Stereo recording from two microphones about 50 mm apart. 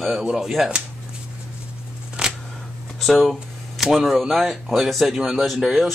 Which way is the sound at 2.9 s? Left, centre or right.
Centre.